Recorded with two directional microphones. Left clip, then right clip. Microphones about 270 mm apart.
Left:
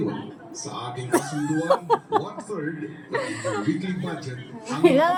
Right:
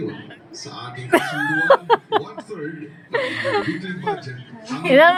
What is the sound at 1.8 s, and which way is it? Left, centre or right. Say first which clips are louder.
A woman's voice: right 4 dB; centre.